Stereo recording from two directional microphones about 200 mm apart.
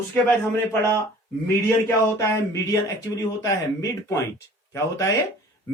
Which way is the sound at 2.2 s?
15° left (ahead or behind).